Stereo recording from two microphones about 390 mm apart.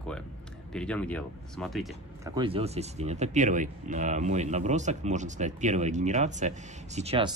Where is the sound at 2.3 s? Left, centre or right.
Centre.